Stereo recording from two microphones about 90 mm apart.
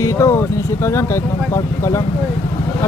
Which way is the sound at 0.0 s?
35° left (ahead or behind).